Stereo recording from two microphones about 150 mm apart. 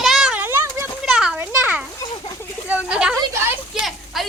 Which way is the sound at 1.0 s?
5° right (ahead or behind).